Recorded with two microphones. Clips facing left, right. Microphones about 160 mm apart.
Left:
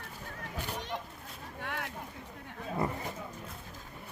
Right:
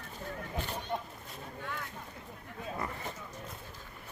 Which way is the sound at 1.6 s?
80° left.